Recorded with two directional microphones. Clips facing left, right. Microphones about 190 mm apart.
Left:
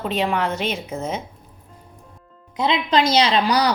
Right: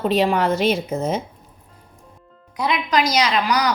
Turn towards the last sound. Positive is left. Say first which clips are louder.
# left 2 dB
turn(degrees=30)  # may be behind; listen again after turning